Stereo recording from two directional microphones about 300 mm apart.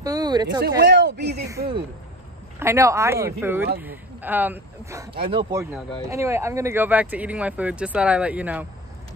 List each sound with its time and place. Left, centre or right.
0.0 s a sound: centre
0.7 s speech: right
2.6 s speech: centre
5.1 s speech: centre